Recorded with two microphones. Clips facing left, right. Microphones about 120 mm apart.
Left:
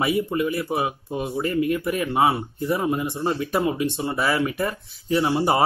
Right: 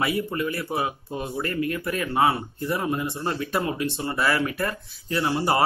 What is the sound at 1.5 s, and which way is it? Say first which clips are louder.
Speech: left 5 dB; 15° left (ahead or behind).